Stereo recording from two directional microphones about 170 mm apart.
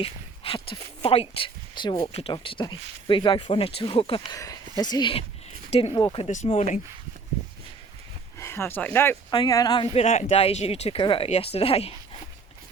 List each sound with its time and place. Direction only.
0.0 s speech: 30° left (ahead or behind)
6.2 s speech: 40° left (ahead or behind)
8.4 s speech: 15° left (ahead or behind)
9.3 s speech: 25° left (ahead or behind)